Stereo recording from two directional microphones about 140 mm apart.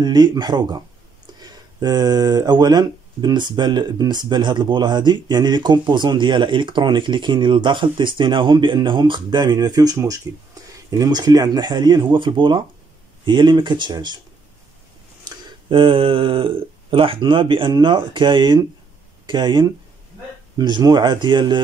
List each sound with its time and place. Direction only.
0.0 s speech: 30° right (ahead or behind)
15.2 s speech: 40° right (ahead or behind)